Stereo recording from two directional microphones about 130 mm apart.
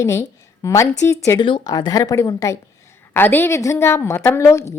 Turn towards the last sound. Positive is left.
turn(degrees=20)  # may be behind; listen again after turning